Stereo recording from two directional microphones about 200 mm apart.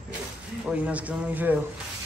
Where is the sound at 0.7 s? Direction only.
5° right (ahead or behind).